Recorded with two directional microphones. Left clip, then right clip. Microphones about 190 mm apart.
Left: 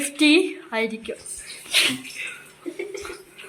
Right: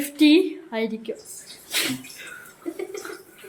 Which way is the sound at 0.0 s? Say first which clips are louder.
Even; 30° right (ahead or behind).